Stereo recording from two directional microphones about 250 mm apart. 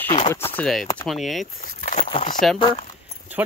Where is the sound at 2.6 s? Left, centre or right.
Centre.